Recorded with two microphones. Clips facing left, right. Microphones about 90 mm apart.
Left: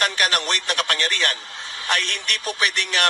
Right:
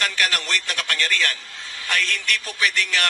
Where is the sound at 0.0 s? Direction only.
20° left (ahead or behind).